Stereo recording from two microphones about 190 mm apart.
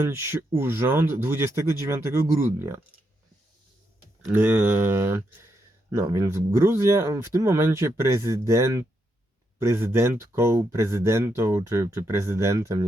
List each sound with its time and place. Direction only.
0.0 s speech: 15° right (ahead or behind)
4.3 s speech: 10° right (ahead or behind)